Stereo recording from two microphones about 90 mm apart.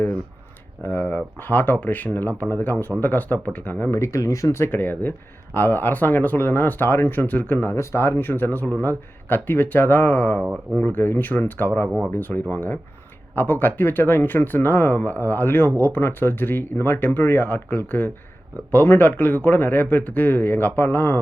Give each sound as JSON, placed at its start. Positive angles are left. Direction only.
{"t": 0.8, "sound": "speech", "side_deg": 20}
{"t": 3.9, "sound": "speech", "side_deg": 35}
{"t": 4.7, "sound": "speech", "side_deg": 20}
{"t": 10.4, "sound": "speech", "side_deg": -15}
{"t": 10.8, "sound": "speech", "side_deg": 20}
{"t": 11.9, "sound": "speech", "side_deg": -15}
{"t": 12.1, "sound": "speech", "side_deg": 20}